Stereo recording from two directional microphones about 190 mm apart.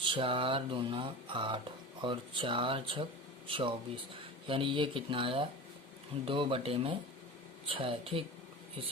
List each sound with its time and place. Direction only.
0.0 s speech: 25° right (ahead or behind)